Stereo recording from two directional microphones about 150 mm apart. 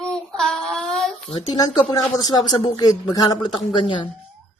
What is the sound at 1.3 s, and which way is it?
Speech, 30° left (ahead or behind).